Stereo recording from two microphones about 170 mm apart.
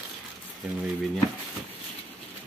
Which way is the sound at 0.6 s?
5° right (ahead or behind).